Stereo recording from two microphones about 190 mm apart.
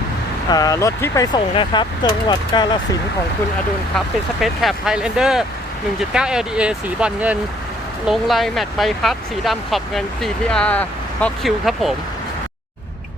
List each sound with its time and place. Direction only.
0.5 s speech: 20° left (ahead or behind)
3.9 s speech: centre (ahead or behind)